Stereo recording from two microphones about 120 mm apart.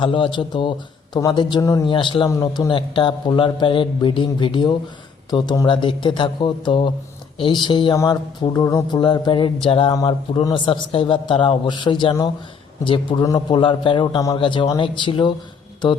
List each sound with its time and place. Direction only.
0.0 s speech: 45° left (ahead or behind)
1.9 s a man's voice: 45° left (ahead or behind)
9.9 s speech: 35° left (ahead or behind)
10.4 s a man's voice: 45° left (ahead or behind)